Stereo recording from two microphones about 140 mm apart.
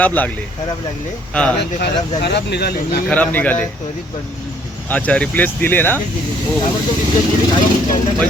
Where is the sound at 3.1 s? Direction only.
10° left (ahead or behind).